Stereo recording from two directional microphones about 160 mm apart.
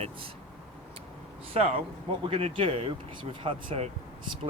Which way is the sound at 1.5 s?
40° right (ahead or behind).